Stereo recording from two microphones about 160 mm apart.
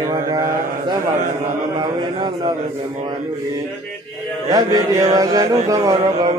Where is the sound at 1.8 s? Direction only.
30° right (ahead or behind).